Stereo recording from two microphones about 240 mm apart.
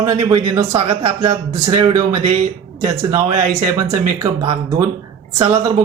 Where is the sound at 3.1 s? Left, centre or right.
Right.